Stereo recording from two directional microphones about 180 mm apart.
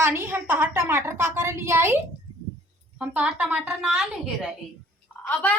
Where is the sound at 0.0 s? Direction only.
10° right (ahead or behind).